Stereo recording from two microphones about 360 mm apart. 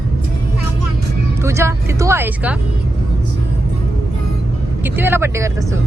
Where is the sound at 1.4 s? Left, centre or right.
Centre.